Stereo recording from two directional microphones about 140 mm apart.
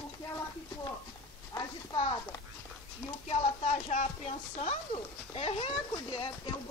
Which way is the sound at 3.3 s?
50° left (ahead or behind).